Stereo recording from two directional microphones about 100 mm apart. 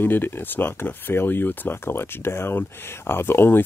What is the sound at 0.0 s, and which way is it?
Speech, 20° left (ahead or behind).